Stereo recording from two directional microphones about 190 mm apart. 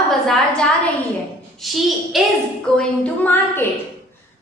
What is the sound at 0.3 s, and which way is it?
A woman's voice, 5° left (ahead or behind).